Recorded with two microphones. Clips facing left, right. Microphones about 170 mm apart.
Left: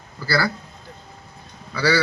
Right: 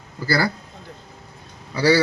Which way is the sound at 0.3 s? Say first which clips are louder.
Right 1 dB; 15° right (ahead or behind).